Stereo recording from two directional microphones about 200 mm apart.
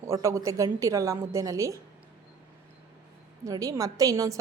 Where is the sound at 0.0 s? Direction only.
15° right (ahead or behind).